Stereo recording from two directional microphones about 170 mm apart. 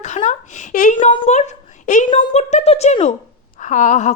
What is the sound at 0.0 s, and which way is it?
A woman's voice, 45° left (ahead or behind).